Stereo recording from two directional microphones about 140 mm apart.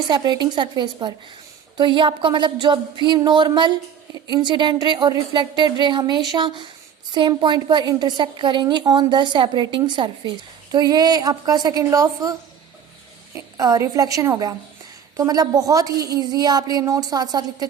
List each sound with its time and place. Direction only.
0.1 s a woman's voice: 30° right (ahead or behind)